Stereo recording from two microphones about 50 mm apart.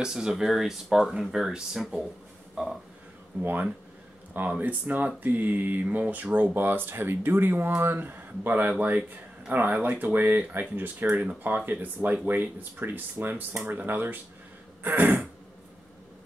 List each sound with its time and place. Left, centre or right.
0.0 s speech: centre
2.5 s a sound: centre
3.3 s speech: right
4.6 s speech: right
6.5 s speech: right
14.8 s throat clearing: right